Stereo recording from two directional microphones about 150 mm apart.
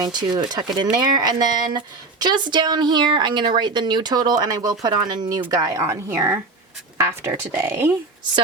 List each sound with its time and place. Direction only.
0.0 s a woman's voice: 30° right (ahead or behind); by 7.9 s 15° right (ahead or behind)